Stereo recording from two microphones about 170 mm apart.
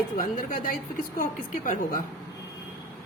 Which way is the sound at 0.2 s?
50° left (ahead or behind).